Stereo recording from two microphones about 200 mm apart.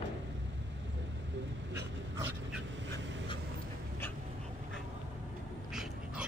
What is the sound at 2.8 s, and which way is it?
Duck, 65° right (ahead or behind).